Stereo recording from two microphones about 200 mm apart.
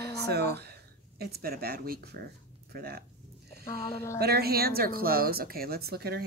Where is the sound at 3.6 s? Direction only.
15° left (ahead or behind).